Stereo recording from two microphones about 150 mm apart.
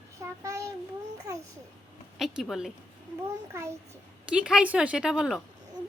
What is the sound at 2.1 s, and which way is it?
Speech, centre (ahead or behind).